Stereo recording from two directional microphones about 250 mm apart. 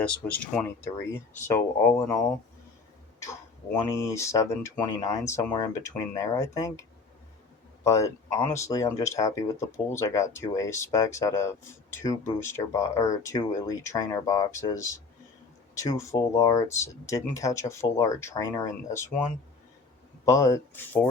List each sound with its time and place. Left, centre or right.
0.0 s speech: centre
3.2 s speech: centre
8.4 s speech: centre
20.2 s speech: centre